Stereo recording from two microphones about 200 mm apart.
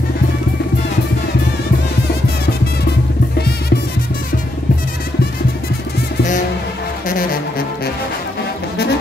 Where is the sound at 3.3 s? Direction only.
55° left (ahead or behind).